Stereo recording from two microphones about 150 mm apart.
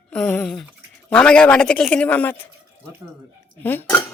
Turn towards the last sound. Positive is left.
turn(degrees=15)  # may be behind; listen again after turning